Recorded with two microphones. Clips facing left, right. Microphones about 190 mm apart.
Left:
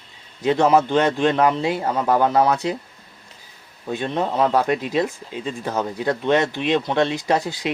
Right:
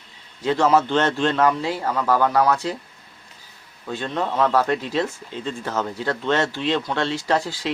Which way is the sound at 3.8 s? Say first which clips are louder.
Left 2 dB; 20° left (ahead or behind).